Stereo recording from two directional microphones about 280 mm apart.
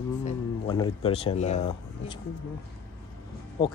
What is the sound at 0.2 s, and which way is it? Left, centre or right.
Speech, centre.